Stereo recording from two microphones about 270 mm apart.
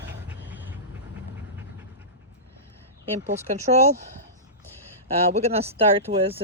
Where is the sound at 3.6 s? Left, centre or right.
Right.